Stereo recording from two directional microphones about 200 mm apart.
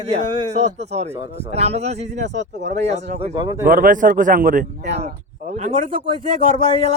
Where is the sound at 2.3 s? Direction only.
60° right (ahead or behind).